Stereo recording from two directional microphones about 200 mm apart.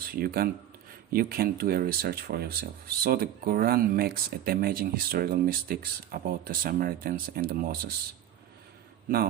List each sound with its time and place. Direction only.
0.0 s speech: 50° right (ahead or behind)